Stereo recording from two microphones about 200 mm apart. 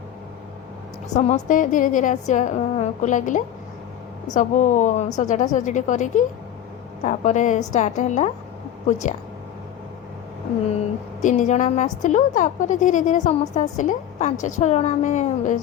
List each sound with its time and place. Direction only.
1.1 s a woman's voice: 40° left (ahead or behind)
11.2 s a woman's voice: 40° left (ahead or behind)